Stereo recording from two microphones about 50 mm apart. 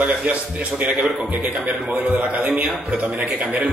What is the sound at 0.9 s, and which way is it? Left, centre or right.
Speech, centre.